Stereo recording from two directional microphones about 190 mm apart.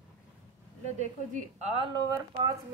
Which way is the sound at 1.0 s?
35° right (ahead or behind).